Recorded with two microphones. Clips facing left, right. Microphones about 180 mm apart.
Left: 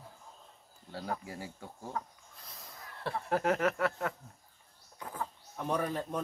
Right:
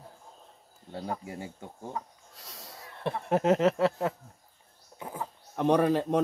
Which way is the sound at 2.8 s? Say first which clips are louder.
Right 4 dB; 20° right (ahead or behind).